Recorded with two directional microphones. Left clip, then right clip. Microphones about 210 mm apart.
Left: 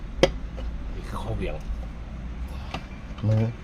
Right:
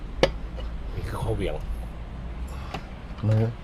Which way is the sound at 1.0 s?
30° right (ahead or behind).